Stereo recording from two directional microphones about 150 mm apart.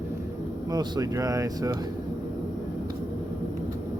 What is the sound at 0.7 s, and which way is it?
Speech, 25° right (ahead or behind).